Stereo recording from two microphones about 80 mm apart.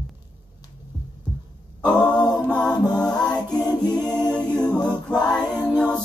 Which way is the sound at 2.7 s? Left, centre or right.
Left.